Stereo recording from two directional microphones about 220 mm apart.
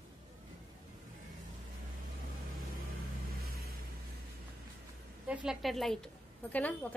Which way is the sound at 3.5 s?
45° right (ahead or behind).